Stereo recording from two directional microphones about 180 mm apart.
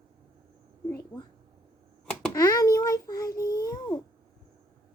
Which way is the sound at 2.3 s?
20° left (ahead or behind).